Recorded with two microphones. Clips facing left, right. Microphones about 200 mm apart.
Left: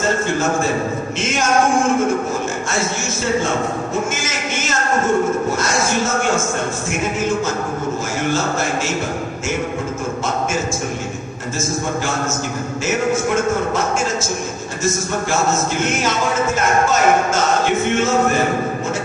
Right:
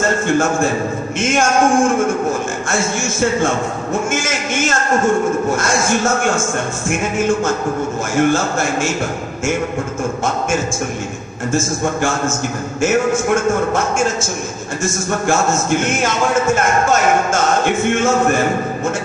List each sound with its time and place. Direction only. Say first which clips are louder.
8.2 s a man's voice: right 5 dB; 50° right (ahead or behind)
17.7 s a man's voice: right 2 dB; 50° right (ahead or behind)